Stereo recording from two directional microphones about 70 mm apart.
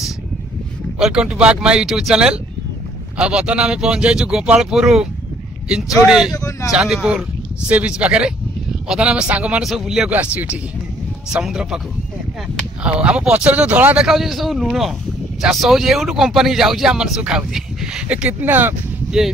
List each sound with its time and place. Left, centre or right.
0.9 s speech: centre
6.3 s speech: left
6.7 s speech: centre
9.6 s speech: centre
10.1 s speech: centre
12.8 s speech: centre
14.0 s speech: centre
18.4 s speech: right